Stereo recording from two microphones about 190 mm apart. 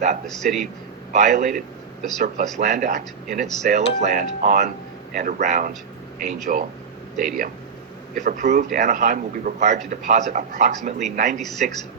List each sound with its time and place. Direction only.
1.1 s a man's voice: 40° right (ahead or behind)
11.3 s speech: centre (ahead or behind)